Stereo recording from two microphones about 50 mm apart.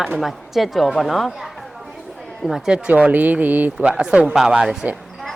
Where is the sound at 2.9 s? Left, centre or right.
Right.